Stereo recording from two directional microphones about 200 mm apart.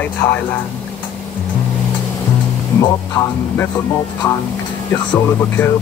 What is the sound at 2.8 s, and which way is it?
Speech, 15° left (ahead or behind).